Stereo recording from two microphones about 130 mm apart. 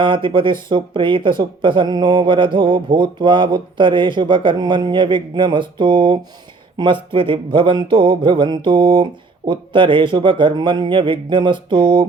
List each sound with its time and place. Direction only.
0.0 s speech: 40° right (ahead or behind)